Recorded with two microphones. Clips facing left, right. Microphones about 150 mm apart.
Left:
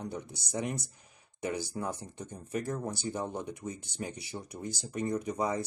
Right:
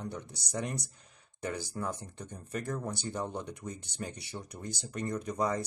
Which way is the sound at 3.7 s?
60° right (ahead or behind).